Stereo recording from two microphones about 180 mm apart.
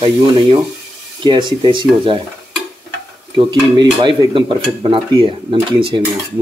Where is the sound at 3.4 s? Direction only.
25° right (ahead or behind).